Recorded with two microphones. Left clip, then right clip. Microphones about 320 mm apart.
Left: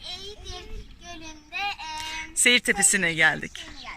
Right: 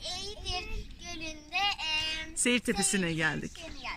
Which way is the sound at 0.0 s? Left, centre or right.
Centre.